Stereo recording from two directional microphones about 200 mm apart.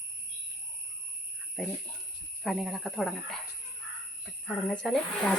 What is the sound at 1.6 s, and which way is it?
Speech, 10° left (ahead or behind).